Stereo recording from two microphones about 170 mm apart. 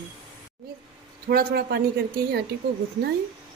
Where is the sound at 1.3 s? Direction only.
65° right (ahead or behind).